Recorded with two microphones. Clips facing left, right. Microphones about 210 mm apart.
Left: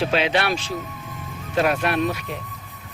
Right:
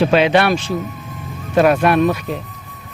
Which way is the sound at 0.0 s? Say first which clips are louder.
Right 8 dB; 55° right (ahead or behind).